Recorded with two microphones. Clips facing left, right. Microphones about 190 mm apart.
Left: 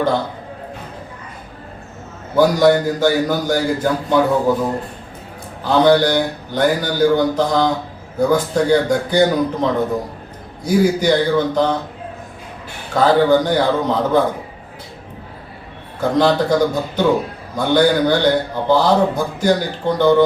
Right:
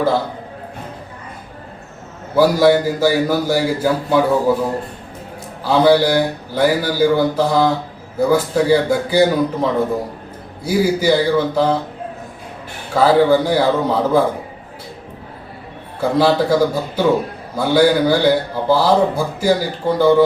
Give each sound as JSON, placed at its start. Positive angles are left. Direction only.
{"t": 2.3, "sound": "a man's voice", "side_deg": -5}
{"t": 5.6, "sound": "a man's voice", "side_deg": -5}
{"t": 12.9, "sound": "a man's voice", "side_deg": -5}
{"t": 16.0, "sound": "a man's voice", "side_deg": -5}